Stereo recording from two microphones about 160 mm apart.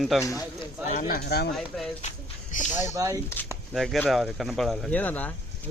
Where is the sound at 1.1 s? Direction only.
90° left.